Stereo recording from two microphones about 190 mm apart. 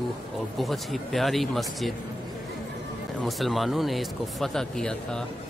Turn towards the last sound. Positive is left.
turn(degrees=5)  # may be behind; listen again after turning